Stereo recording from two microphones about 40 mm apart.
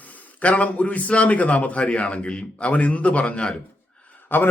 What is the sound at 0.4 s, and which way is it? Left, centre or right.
A man's voice, left.